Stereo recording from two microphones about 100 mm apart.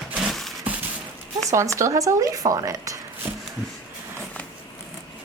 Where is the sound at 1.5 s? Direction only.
30° right (ahead or behind).